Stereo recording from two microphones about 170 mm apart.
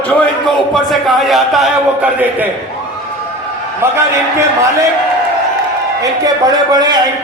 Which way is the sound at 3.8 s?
15° right (ahead or behind).